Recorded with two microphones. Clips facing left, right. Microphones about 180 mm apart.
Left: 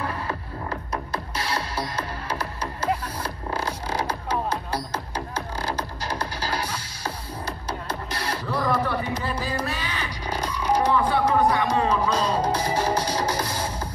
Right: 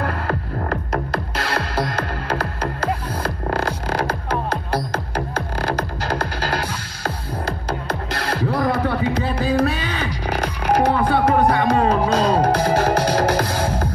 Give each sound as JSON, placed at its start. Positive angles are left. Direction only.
{"t": 0.0, "sound": "music", "side_deg": -70}
{"t": 3.4, "sound": "music", "side_deg": -65}
{"t": 8.2, "sound": "music", "side_deg": -90}
{"t": 8.5, "sound": "music", "side_deg": -55}